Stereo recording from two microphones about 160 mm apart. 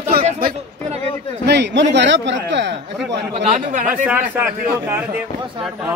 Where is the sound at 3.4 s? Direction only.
50° right (ahead or behind).